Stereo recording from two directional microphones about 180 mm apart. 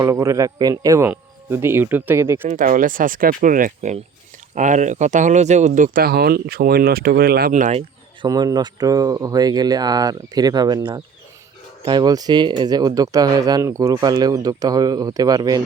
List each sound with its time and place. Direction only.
0.0 s speech: 15° right (ahead or behind)
2.5 s speech: 45° right (ahead or behind)
7.5 s speech: 40° right (ahead or behind)
8.3 s speech: 20° right (ahead or behind)